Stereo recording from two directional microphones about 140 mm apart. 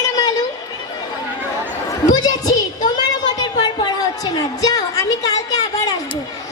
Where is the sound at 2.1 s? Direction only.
30° left (ahead or behind).